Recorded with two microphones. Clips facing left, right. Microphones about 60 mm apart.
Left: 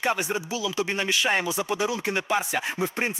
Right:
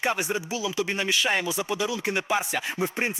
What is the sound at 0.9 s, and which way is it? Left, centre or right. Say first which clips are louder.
Speech: left 1 dB; centre.